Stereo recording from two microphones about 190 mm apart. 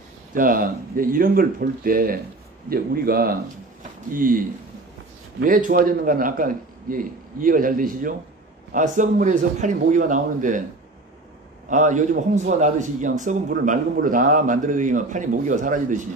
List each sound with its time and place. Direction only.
0.3 s a man's voice: 45° right (ahead or behind)
11.7 s a man's voice: 40° right (ahead or behind)